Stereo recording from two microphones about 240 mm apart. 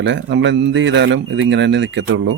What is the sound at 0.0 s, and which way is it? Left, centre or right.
Speech, right.